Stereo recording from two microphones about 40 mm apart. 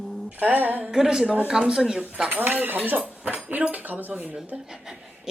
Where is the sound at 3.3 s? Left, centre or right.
Right.